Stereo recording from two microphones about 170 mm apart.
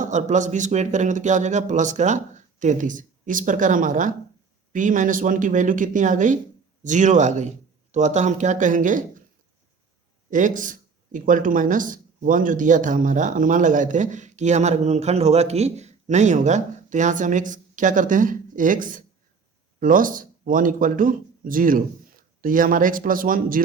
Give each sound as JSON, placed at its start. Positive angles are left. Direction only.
{"t": 0.0, "sound": "speech", "side_deg": -45}
{"t": 10.2, "sound": "speech", "side_deg": -50}